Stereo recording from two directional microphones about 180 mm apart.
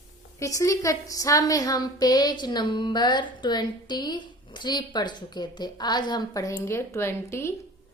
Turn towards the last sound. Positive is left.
turn(degrees=15)  # may be behind; listen again after turning